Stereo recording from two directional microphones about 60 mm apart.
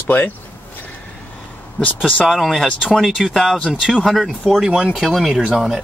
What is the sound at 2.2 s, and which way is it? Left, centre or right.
Speech, centre.